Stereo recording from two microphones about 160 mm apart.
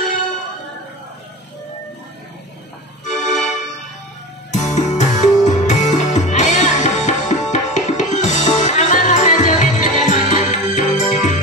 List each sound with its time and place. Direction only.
3.1 s music: 50° left (ahead or behind)
4.5 s music: 45° left (ahead or behind)